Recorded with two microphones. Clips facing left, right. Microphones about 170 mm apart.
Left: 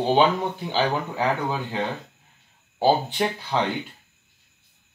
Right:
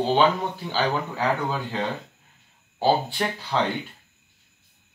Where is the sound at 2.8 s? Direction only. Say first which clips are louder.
Left 2 dB; 15° left (ahead or behind).